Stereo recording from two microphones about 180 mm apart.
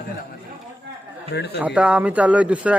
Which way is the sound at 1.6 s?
5° right (ahead or behind).